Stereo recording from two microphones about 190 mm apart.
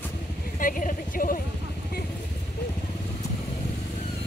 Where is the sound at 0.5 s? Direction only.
45° left (ahead or behind).